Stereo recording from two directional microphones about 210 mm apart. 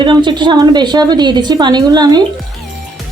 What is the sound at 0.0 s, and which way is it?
A woman's voice, 20° right (ahead or behind).